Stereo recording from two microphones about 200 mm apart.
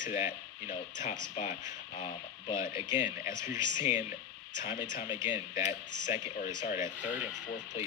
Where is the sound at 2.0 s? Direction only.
25° left (ahead or behind).